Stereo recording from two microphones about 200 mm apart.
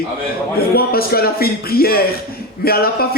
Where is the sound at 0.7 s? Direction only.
50° left (ahead or behind).